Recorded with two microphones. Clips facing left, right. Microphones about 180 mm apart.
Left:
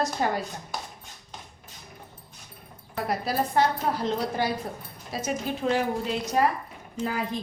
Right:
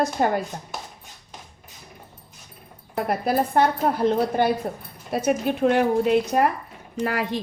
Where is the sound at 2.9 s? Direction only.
55° right (ahead or behind).